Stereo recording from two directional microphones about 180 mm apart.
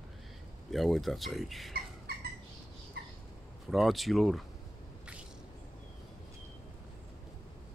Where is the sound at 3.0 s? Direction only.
60° right (ahead or behind).